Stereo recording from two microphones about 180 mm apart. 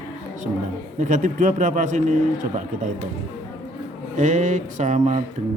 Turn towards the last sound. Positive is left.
turn(degrees=-40)  # may be behind; listen again after turning